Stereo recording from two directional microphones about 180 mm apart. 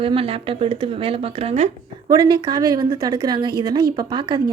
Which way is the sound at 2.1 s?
25° right (ahead or behind).